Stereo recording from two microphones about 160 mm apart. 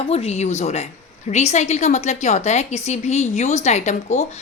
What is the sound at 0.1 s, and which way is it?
A woman's voice, 40° left (ahead or behind).